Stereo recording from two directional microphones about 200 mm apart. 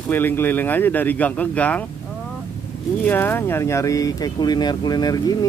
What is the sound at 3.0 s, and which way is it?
Speech, 10° left (ahead or behind).